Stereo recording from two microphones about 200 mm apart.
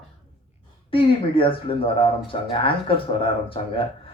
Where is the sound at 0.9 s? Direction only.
25° left (ahead or behind).